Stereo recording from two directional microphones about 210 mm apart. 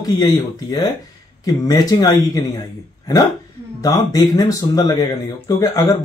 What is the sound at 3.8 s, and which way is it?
Speech, 20° left (ahead or behind).